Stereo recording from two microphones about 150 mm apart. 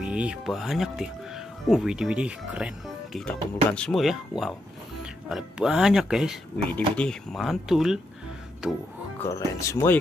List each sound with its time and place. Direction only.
0.0 s speech: 5° right (ahead or behind)
9.2 s speech: 20° left (ahead or behind)